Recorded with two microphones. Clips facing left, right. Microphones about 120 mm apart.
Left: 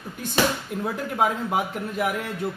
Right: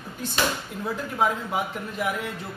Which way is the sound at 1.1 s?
45° left (ahead or behind).